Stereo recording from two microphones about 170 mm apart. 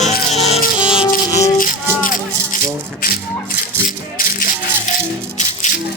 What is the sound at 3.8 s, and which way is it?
Rattle, 55° left (ahead or behind).